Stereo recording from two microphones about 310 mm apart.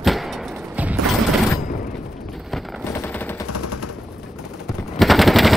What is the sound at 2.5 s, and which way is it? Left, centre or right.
Machine gun, centre.